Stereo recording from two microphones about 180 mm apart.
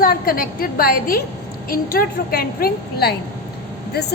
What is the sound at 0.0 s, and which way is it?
A woman's voice, 55° left (ahead or behind).